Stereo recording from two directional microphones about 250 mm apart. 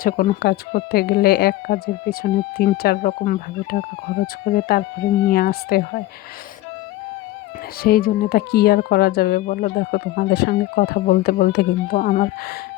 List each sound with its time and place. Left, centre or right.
0.0 s speech: left
7.8 s speech: left